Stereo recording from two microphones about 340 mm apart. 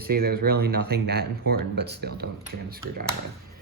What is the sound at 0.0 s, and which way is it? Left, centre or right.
Speech, right.